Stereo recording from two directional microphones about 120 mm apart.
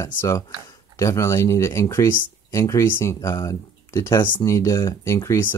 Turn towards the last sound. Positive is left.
turn(degrees=25)  # may be behind; listen again after turning